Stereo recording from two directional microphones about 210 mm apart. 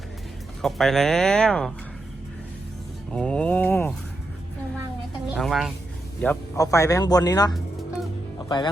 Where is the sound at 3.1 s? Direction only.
5° left (ahead or behind).